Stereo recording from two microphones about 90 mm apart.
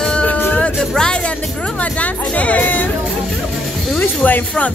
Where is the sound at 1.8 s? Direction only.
15° left (ahead or behind).